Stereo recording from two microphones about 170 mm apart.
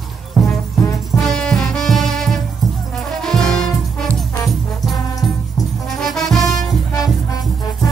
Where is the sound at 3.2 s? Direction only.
5° left (ahead or behind).